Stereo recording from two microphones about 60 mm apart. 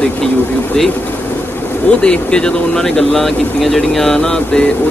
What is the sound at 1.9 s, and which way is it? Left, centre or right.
Speech, centre.